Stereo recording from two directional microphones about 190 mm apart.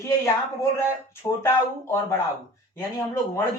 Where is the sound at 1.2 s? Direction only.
15° left (ahead or behind).